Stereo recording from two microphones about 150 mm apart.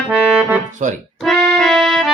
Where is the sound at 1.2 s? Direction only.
Centre (ahead or behind).